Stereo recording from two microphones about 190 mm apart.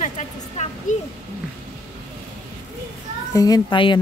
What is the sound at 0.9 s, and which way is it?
Speech, 40° left (ahead or behind).